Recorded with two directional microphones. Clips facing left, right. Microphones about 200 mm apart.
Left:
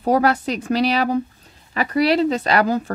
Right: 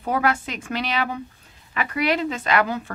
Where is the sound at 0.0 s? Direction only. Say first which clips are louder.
Left 6 dB; 40° left (ahead or behind).